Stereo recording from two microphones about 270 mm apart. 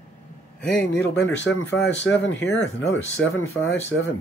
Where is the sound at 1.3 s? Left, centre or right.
Left.